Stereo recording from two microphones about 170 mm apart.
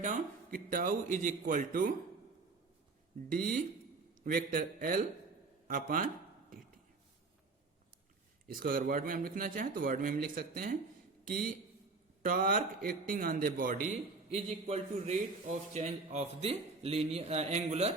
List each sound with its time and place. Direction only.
0.0 s a man's voice: 50° right (ahead or behind)
3.3 s a man's voice: 55° right (ahead or behind)
8.4 s a man's voice: 60° right (ahead or behind); by 17.9 s 40° right (ahead or behind)